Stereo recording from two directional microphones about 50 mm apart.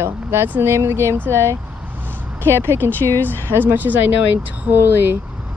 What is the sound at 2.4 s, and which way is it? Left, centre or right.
Speech, right.